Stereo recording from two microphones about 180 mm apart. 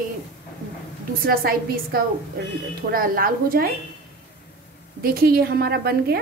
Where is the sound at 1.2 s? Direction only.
55° right (ahead or behind).